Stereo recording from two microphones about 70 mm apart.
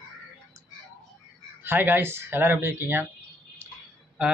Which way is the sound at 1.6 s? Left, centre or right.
Right.